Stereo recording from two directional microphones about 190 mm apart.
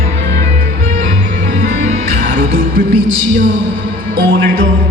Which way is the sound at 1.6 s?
45° right (ahead or behind).